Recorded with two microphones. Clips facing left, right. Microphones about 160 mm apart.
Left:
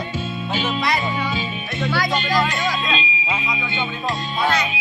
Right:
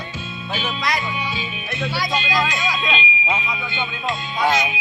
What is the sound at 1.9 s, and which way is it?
Speech, 55° left (ahead or behind).